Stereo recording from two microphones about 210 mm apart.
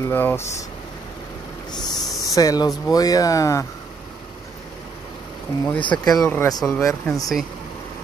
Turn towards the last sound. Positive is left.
turn(degrees=5)  # may be behind; listen again after turning